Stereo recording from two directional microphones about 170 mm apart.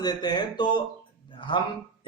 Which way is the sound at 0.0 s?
25° left (ahead or behind).